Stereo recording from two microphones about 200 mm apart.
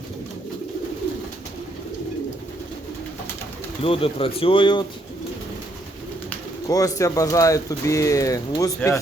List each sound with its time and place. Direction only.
3.8 s speech: 25° left (ahead or behind)
6.7 s speech: 15° left (ahead or behind)